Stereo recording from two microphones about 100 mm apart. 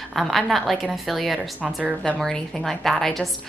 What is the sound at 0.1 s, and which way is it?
Speech, centre (ahead or behind).